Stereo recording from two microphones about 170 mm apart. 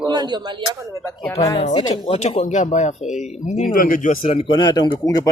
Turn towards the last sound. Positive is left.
turn(degrees=20)  # may be behind; listen again after turning